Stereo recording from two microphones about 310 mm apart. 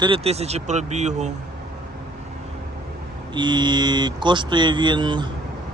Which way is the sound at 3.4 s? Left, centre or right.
Centre.